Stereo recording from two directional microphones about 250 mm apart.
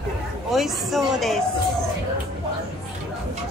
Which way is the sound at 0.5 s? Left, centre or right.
Centre.